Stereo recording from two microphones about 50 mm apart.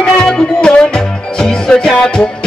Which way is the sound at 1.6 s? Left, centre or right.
Centre.